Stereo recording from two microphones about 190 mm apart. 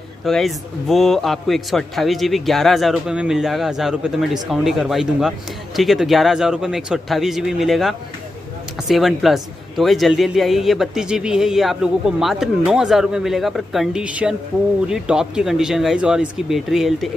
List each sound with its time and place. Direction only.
0.2 s a man's voice: centre (ahead or behind)